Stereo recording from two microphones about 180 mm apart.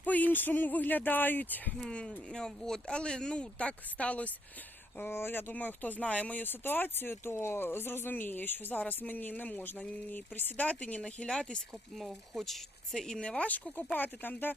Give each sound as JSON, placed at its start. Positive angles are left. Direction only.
{"t": 0.0, "sound": "speech", "side_deg": 10}